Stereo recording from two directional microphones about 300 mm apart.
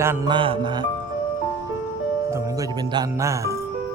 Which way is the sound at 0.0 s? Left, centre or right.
Centre.